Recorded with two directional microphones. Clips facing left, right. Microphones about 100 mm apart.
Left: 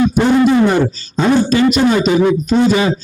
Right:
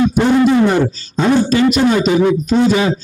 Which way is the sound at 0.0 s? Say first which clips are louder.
Even; 20° left (ahead or behind).